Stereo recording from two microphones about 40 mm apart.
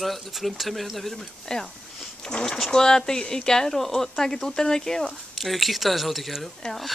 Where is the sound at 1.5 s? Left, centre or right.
Centre.